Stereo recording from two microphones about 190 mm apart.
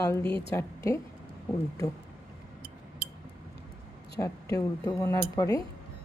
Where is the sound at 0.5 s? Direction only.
15° left (ahead or behind).